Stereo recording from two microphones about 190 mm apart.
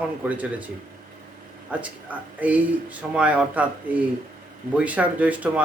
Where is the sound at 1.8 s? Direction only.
5° right (ahead or behind).